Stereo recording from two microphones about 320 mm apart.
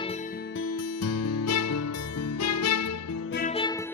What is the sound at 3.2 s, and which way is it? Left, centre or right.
Music, left.